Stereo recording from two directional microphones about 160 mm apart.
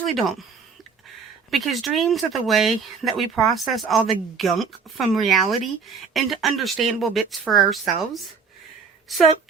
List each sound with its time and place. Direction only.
0.0 s speech: centre (ahead or behind)
1.5 s speech: centre (ahead or behind)